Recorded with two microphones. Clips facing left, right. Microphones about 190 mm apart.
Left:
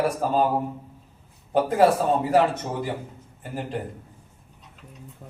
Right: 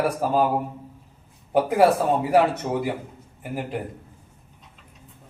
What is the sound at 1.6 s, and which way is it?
A man's voice, 10° right (ahead or behind).